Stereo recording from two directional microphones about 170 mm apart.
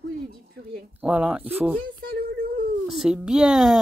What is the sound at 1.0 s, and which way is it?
Speech, 10° right (ahead or behind).